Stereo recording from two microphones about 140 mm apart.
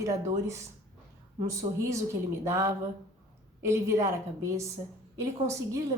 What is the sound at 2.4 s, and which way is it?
A woman's voice, 20° right (ahead or behind).